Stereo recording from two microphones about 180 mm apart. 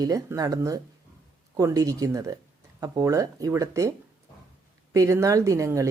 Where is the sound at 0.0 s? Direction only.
20° right (ahead or behind).